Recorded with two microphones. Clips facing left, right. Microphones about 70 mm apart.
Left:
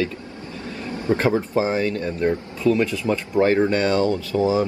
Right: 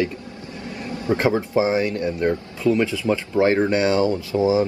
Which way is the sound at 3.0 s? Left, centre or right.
Left.